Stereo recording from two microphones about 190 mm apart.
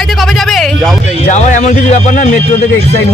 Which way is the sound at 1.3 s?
40° left (ahead or behind).